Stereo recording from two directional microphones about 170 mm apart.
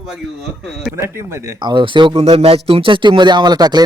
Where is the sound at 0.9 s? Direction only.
15° right (ahead or behind).